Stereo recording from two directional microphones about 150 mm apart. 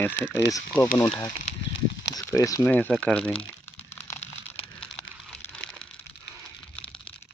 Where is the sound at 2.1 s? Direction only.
20° left (ahead or behind).